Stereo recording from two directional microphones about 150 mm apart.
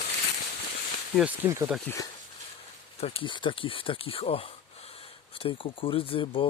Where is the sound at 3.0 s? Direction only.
35° left (ahead or behind).